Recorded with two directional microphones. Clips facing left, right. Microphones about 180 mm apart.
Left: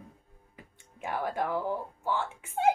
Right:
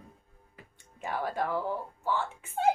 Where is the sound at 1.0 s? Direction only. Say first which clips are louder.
Even; 15° left (ahead or behind).